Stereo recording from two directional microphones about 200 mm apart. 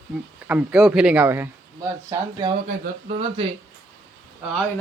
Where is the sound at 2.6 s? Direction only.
35° right (ahead or behind).